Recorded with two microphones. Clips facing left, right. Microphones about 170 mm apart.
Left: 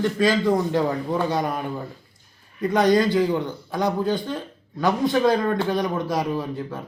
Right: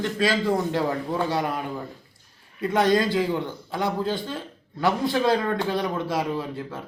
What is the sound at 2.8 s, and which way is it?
Speech, 20° left (ahead or behind).